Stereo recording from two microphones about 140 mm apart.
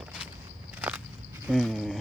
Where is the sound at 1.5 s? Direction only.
Centre (ahead or behind).